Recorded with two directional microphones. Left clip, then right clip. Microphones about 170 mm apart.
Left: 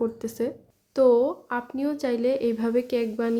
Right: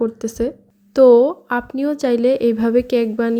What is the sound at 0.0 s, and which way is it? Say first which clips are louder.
A woman's voice: right 7 dB; 30° right (ahead or behind).